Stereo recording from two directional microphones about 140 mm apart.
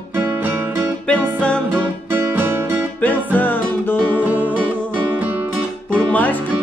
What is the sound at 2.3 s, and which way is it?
Music, 15° right (ahead or behind).